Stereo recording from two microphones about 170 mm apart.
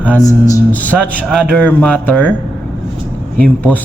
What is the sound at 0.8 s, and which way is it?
Speech, 5° left (ahead or behind).